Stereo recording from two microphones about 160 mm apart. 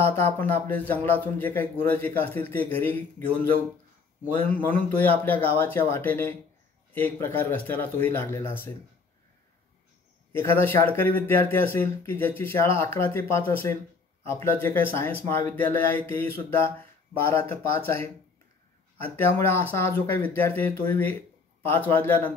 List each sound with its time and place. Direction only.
0.0 s speech: 15° left (ahead or behind)
4.4 s speech: 10° left (ahead or behind)
10.3 s speech: 15° left (ahead or behind)